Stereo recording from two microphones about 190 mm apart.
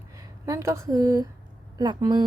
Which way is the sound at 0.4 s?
15° right (ahead or behind).